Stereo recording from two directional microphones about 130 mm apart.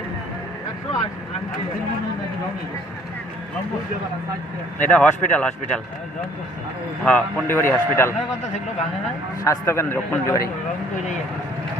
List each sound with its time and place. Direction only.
4.8 s a man's voice: 10° left (ahead or behind)
7.0 s a man's voice: 15° left (ahead or behind)
9.4 s a man's voice: 20° left (ahead or behind)